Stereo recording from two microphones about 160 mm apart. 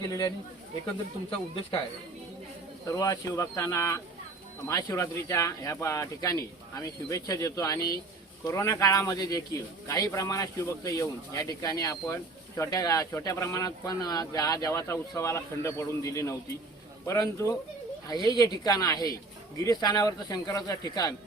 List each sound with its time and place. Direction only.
2.8 s a man's voice: 20° left (ahead or behind)